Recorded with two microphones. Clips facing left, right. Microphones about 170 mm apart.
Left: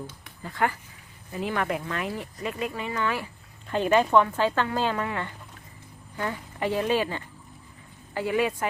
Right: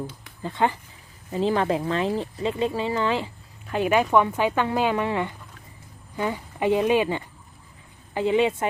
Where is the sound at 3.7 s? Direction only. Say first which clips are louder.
Right 1 dB; 10° right (ahead or behind).